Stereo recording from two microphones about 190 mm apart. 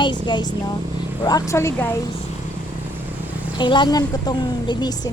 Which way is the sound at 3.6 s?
25° left (ahead or behind).